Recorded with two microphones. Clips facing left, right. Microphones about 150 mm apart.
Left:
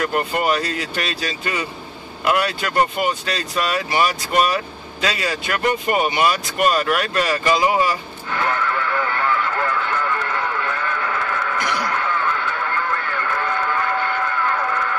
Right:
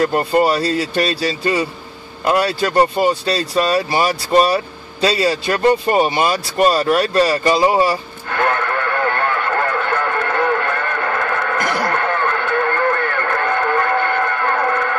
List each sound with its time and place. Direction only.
0.0 s speech: 35° right (ahead or behind)
8.3 s radio: 60° right (ahead or behind)